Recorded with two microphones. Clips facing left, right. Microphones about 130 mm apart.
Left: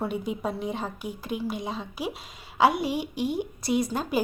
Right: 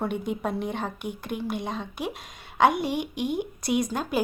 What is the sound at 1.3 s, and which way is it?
Speech, 55° right (ahead or behind).